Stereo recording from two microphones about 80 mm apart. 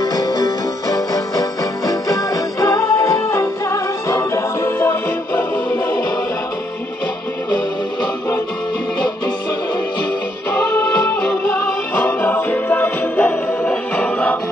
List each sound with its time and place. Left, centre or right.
0.0 s music: left
2.6 s music: left
11.9 s music: left